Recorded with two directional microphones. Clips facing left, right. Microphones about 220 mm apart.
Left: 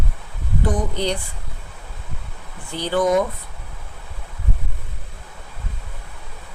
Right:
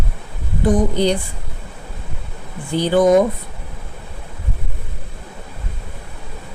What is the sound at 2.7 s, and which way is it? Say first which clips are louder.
Speech: right 6 dB; 15° right (ahead or behind).